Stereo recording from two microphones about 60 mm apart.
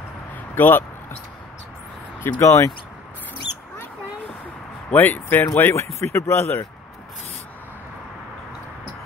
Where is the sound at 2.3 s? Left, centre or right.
Left.